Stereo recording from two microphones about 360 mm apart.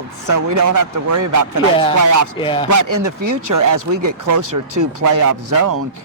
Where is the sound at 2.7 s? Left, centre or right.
Right.